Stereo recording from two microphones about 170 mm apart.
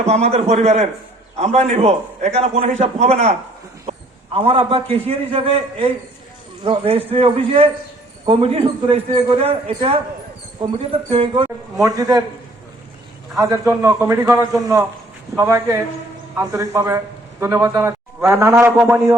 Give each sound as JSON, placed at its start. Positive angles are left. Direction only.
{"t": 0.0, "sound": "a man's voice", "side_deg": -40}
{"t": 4.4, "sound": "a man's voice", "side_deg": -35}
{"t": 11.8, "sound": "a man's voice", "side_deg": -20}
{"t": 13.3, "sound": "a man's voice", "side_deg": -15}